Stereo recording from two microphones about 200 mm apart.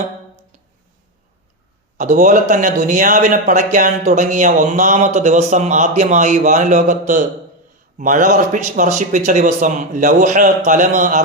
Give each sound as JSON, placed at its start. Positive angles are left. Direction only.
{"t": 2.0, "sound": "a man's voice", "side_deg": -40}